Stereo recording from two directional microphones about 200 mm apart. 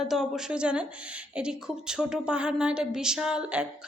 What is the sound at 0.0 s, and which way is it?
A woman's voice, centre (ahead or behind).